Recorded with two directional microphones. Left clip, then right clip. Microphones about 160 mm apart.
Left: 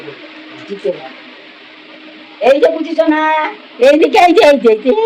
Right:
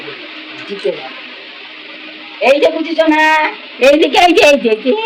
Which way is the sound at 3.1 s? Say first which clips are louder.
Right 3 dB; 20° left (ahead or behind).